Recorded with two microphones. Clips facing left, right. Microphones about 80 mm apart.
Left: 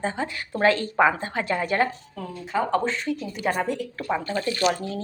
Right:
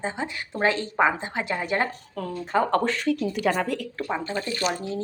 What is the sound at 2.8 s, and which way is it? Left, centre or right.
A woman's voice, right.